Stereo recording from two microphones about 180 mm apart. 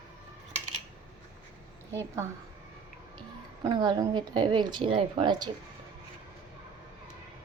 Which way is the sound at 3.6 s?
20° right (ahead or behind).